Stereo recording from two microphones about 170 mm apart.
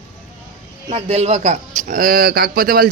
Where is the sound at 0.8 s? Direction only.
35° right (ahead or behind); by 2.9 s 60° right (ahead or behind).